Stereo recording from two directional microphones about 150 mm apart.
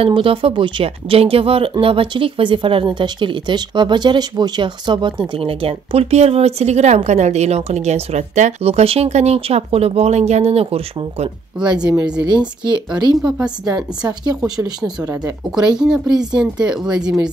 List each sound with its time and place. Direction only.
0.0 s speech: 35° right (ahead or behind)
11.6 s speech: 30° right (ahead or behind)
15.0 s speech: 25° right (ahead or behind)
15.6 s speech: 5° right (ahead or behind)